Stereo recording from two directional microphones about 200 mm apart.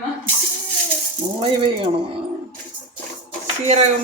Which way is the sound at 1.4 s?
25° right (ahead or behind).